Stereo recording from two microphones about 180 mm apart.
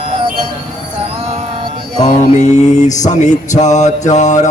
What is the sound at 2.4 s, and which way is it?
Mantra, 40° left (ahead or behind).